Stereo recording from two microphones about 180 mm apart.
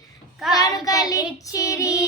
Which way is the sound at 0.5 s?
20° left (ahead or behind).